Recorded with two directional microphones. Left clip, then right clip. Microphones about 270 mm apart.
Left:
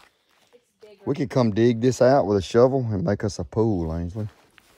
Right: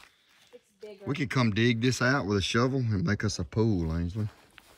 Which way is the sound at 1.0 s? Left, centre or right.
Centre.